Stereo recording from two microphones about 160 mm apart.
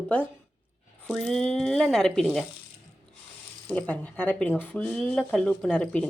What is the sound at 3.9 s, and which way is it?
Speech, 10° left (ahead or behind).